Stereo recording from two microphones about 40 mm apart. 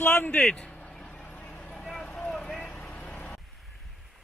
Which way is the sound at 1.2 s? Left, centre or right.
Left.